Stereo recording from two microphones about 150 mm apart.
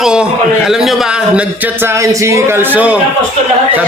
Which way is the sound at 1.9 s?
20° right (ahead or behind).